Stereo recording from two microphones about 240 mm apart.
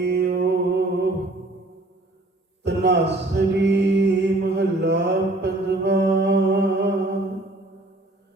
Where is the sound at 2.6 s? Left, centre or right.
Right.